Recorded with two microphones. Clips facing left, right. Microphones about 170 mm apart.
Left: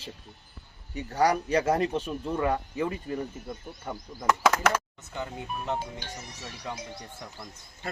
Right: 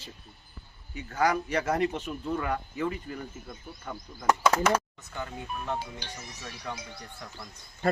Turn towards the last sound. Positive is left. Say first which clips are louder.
# left 1 dB
turn(degrees=20)  # may be behind; listen again after turning